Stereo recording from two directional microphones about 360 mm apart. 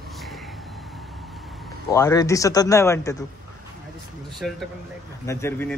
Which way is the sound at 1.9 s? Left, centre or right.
Centre.